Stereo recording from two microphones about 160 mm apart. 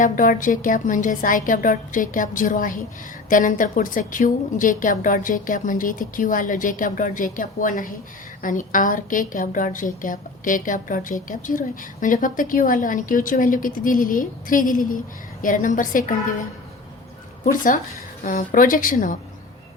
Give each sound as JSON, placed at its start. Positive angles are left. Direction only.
{"t": 0.0, "sound": "a woman's voice", "side_deg": 55}